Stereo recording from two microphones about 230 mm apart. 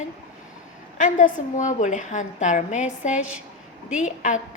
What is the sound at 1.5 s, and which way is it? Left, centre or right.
A woman's voice, left.